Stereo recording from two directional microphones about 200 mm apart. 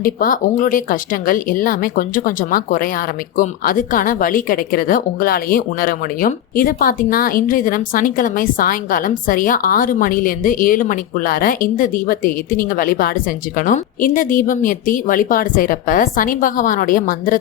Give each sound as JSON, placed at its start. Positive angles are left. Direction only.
{"t": 0.0, "sound": "speech", "side_deg": 45}